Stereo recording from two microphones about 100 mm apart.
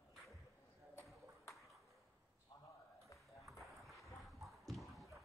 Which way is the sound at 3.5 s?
Centre (ahead or behind).